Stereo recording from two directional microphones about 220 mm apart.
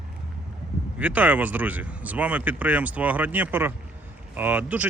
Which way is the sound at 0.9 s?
5° right (ahead or behind).